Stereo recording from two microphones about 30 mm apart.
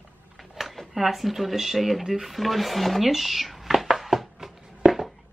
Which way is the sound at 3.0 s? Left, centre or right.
Centre.